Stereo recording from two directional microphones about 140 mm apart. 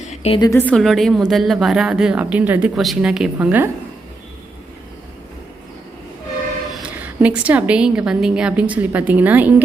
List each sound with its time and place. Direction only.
0.0 s a sound: 55° left (ahead or behind)
0.5 s a woman's voice: 10° left (ahead or behind)
0.8 s speech: centre (ahead or behind)
2.7 s speech: centre (ahead or behind)
7.0 s a woman's voice: 10° right (ahead or behind)